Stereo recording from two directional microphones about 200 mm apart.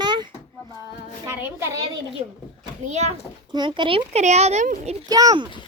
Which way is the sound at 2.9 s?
35° right (ahead or behind).